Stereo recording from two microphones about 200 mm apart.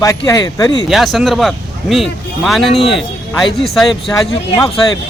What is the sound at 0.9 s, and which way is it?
Speech, centre (ahead or behind).